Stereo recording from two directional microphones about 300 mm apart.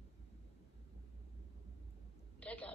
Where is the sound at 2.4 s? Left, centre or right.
Centre.